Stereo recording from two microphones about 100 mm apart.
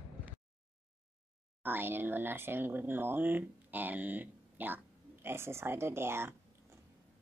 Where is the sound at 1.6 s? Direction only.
20° right (ahead or behind).